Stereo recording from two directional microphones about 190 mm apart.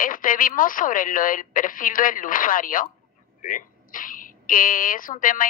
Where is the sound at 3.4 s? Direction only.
45° left (ahead or behind).